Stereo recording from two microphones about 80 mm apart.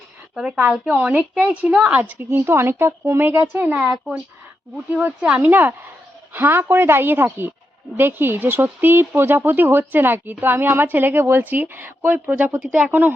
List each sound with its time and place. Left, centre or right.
0.3 s speech: centre
3.8 s speech: centre
5.0 s speech: centre
5.4 s speech: right